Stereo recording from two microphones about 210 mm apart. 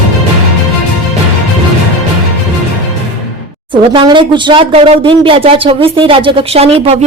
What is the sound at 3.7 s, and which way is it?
Speech, 25° right (ahead or behind).